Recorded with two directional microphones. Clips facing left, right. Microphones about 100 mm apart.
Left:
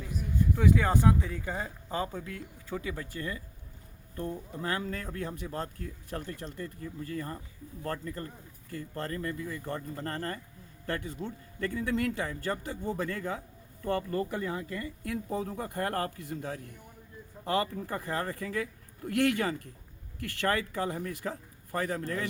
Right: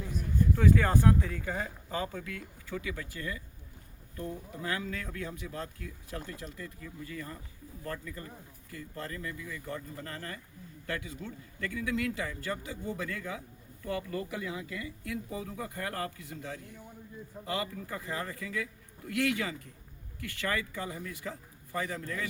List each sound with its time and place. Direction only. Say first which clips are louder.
0.1 s a sound: even; centre (ahead or behind)
0.6 s speech: left 1 dB; 15° left (ahead or behind); by 6.3 s 45° left (ahead or behind)
6.4 s speech: left 4 dB; 35° left (ahead or behind); by 22.3 s 55° left (ahead or behind)